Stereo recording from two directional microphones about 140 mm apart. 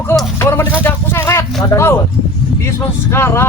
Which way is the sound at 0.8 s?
15° left (ahead or behind).